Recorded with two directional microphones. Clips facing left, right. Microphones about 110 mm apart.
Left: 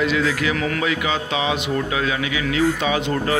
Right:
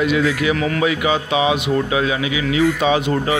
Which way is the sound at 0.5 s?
5° right (ahead or behind).